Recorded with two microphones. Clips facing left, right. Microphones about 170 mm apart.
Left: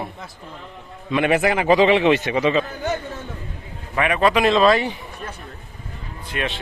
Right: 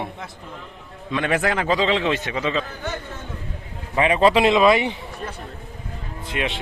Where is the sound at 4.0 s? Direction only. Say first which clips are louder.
Right 2 dB; 25° right (ahead or behind).